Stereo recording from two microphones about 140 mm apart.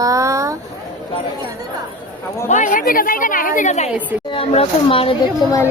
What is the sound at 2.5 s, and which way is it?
A woman's voice, 65° left (ahead or behind).